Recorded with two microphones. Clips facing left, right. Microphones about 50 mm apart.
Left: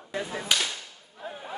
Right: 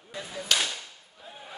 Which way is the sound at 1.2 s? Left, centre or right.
Left.